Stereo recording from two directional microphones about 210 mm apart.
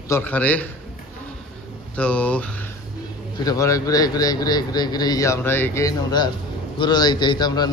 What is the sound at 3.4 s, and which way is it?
A man's voice, 15° left (ahead or behind).